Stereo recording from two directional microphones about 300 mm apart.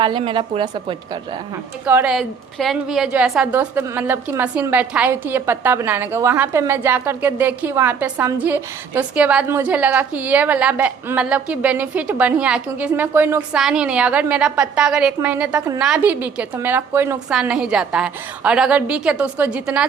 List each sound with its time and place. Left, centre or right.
0.0 s a woman's voice: centre